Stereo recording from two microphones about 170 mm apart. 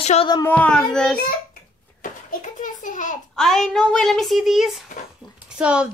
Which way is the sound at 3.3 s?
5° left (ahead or behind).